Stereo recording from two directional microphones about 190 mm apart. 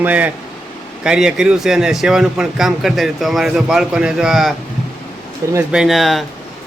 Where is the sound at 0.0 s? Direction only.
10° right (ahead or behind).